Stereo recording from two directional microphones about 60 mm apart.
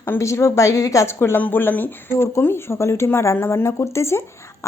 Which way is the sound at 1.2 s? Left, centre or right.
Left.